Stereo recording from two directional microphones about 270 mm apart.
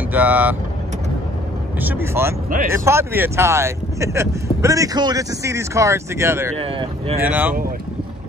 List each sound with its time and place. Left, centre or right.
0.1 s speech: centre
1.8 s speech: centre
6.5 s speech: right
7.2 s speech: centre